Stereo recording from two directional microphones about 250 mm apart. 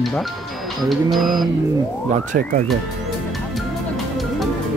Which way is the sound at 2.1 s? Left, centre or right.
Right.